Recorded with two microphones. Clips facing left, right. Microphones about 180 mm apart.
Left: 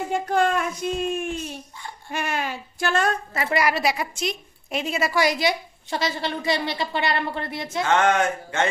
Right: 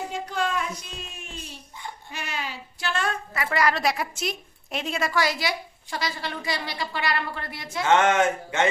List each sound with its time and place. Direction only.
0.1 s speech: 55° left (ahead or behind)
3.5 s a woman's voice: 10° left (ahead or behind)
5.2 s a woman's voice: 20° left (ahead or behind)
7.9 s speech: 20° right (ahead or behind)